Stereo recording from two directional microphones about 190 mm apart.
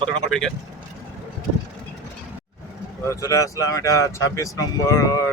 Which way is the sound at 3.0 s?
15° left (ahead or behind).